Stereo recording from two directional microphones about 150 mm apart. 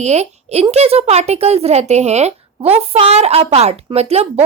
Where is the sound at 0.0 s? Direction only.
50° right (ahead or behind).